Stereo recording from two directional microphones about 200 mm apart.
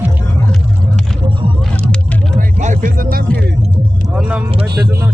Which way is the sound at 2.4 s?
40° right (ahead or behind).